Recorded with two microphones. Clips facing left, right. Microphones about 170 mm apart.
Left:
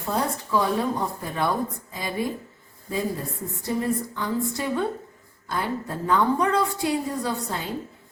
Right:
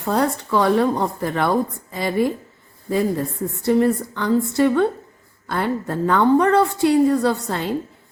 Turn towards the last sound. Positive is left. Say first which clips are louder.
# right 8 dB
turn(degrees=-70)  # may be behind; listen again after turning